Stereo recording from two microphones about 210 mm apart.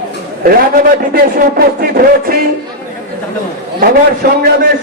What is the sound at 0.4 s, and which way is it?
A man's voice, 45° right (ahead or behind).